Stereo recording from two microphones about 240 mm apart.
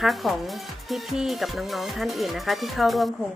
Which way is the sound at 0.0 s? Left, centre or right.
Centre.